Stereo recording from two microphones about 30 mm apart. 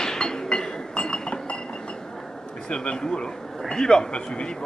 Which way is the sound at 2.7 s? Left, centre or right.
Left.